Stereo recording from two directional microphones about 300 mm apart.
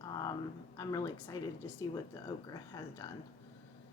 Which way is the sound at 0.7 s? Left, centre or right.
Centre.